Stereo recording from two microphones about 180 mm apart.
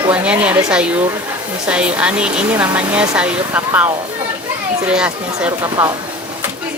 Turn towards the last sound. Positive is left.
turn(degrees=-20)  # may be behind; listen again after turning